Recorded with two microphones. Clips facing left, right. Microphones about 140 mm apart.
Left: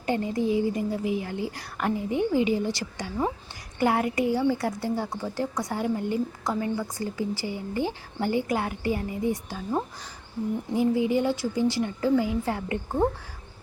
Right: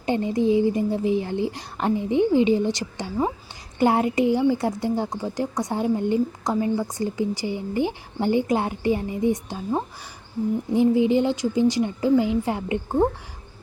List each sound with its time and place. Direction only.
0.0 s speech: 20° right (ahead or behind)